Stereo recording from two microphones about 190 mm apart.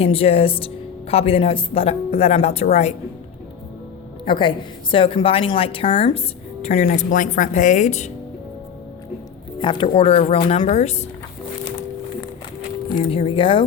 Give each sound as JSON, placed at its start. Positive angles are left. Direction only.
{"t": 0.0, "sound": "a woman's voice", "side_deg": 30}
{"t": 4.3, "sound": "a woman's voice", "side_deg": 25}
{"t": 9.6, "sound": "a woman's voice", "side_deg": 25}
{"t": 12.9, "sound": "a woman's voice", "side_deg": 30}